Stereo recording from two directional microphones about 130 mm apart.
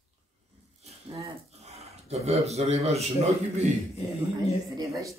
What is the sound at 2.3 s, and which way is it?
Speech, 55° right (ahead or behind).